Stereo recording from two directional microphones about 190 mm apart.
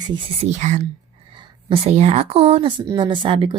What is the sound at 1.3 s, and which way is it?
Speech, 30° right (ahead or behind).